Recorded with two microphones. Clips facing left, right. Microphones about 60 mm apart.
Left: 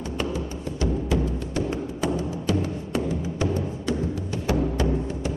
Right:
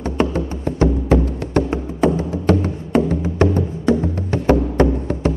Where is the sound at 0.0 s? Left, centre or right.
Right.